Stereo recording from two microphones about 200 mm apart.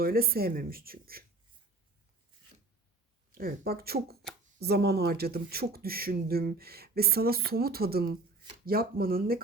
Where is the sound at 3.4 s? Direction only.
50° right (ahead or behind).